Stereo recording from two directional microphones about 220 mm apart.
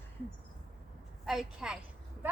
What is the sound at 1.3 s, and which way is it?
Speech, centre (ahead or behind).